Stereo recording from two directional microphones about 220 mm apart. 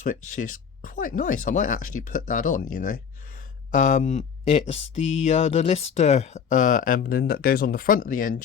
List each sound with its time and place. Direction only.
0.0 s speech: 35° left (ahead or behind)